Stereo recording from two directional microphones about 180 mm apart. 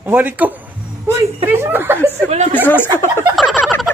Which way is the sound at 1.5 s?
10° right (ahead or behind).